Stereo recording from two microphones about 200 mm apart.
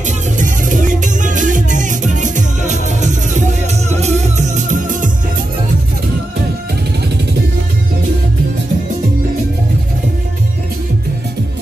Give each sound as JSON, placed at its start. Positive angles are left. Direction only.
{"t": 0.4, "sound": "music", "side_deg": -40}